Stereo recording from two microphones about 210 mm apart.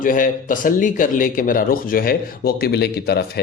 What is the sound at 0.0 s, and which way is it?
A man's voice, 40° left (ahead or behind).